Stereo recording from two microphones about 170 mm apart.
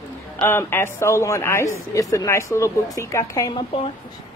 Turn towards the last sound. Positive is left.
turn(degrees=20)  # may be behind; listen again after turning